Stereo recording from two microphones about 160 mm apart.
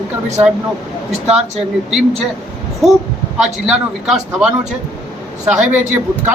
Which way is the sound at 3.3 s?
5° right (ahead or behind).